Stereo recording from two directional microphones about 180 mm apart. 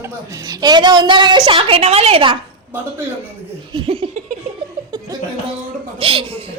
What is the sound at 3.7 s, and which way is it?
Laughter, 30° right (ahead or behind).